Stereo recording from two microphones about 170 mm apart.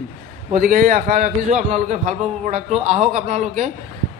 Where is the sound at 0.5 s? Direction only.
50° right (ahead or behind).